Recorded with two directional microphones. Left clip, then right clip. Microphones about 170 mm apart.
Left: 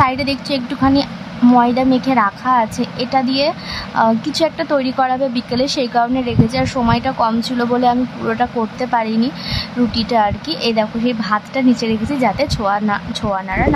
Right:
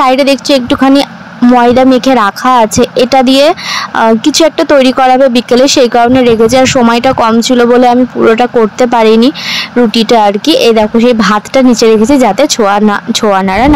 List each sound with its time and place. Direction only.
0.0 s speech: 50° right (ahead or behind)